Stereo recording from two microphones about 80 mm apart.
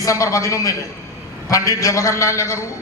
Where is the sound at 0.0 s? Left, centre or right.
Left.